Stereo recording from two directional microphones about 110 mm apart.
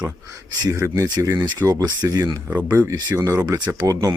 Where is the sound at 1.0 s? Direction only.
35° right (ahead or behind).